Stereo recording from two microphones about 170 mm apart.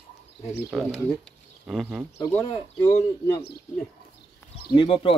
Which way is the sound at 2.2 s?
20° left (ahead or behind).